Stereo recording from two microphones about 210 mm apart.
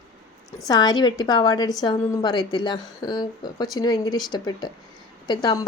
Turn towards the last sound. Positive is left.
turn(degrees=20)  # may be behind; listen again after turning